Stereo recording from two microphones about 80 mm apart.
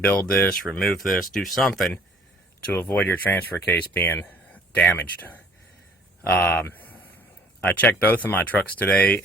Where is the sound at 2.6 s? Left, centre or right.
Left.